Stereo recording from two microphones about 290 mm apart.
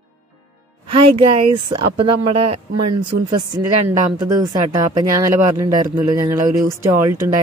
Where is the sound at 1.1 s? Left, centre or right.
Centre.